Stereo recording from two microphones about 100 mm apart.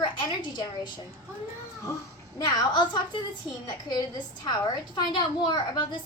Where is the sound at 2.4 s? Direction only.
45° left (ahead or behind).